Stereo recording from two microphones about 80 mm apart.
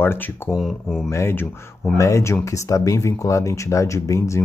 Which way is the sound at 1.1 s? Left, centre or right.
Left.